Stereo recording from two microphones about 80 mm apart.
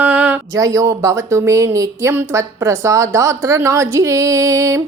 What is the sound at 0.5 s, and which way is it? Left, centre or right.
A woman's voice, right.